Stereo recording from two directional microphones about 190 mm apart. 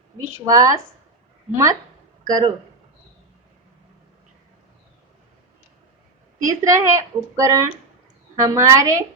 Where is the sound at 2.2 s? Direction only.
20° right (ahead or behind).